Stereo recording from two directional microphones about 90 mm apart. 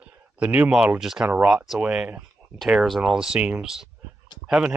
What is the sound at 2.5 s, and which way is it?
Speech, centre (ahead or behind).